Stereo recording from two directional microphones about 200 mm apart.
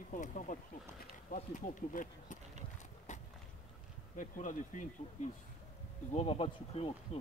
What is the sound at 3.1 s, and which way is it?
Walk, 35° left (ahead or behind).